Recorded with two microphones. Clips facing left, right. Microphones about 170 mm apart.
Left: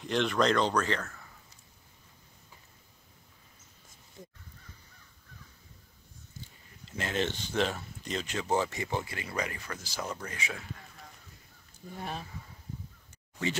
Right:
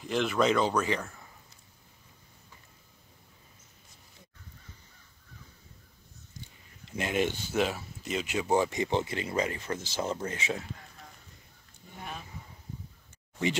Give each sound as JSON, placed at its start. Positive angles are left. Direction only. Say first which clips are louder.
{"t": 0.0, "sound": "speech", "louder": "right 1 dB", "side_deg": -5}
{"t": 6.9, "sound": "speech", "louder": "right 3 dB", "side_deg": -15}
{"t": 12.0, "sound": "speech", "louder": "left 3 dB", "side_deg": 35}